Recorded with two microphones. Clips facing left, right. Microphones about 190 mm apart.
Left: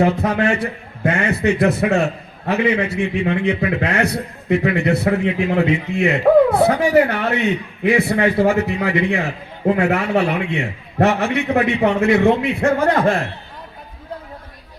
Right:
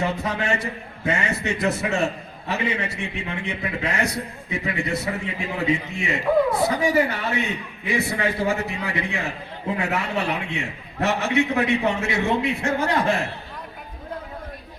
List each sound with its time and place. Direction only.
0.0 s a man's voice: 60° left (ahead or behind)